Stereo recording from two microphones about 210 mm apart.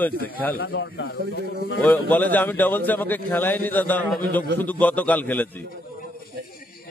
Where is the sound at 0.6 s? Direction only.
65° left (ahead or behind).